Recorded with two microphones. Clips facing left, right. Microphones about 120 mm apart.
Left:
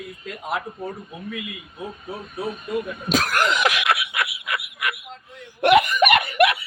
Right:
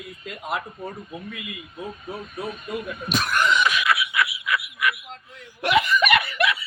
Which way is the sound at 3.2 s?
90° left.